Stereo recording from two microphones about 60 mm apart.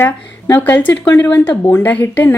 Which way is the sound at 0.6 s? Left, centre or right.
Left.